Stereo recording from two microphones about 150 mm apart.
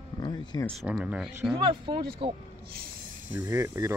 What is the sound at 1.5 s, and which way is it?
Speech, 35° right (ahead or behind).